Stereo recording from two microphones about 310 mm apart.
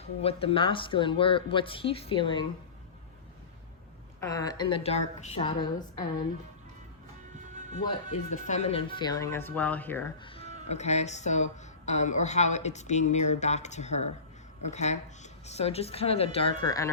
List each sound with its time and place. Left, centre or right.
0.2 s speech: centre
4.2 s speech: centre
7.5 s music: right
7.9 s speech: left